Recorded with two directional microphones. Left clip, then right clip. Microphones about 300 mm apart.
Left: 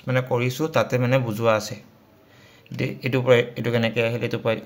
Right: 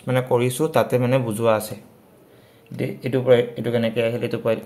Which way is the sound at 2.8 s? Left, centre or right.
Centre.